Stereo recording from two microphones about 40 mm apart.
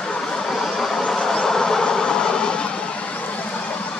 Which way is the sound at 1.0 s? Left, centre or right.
Centre.